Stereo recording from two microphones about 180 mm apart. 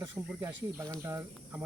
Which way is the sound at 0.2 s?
20° right (ahead or behind).